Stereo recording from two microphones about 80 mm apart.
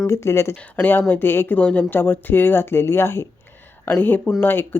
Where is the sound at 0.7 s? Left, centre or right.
Left.